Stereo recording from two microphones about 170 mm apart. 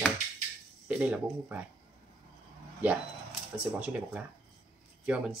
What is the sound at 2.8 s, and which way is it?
Speech, 5° right (ahead or behind).